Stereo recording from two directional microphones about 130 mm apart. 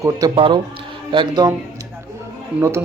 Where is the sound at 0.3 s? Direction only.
40° right (ahead or behind).